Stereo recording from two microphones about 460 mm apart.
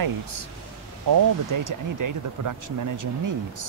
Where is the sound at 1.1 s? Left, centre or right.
Right.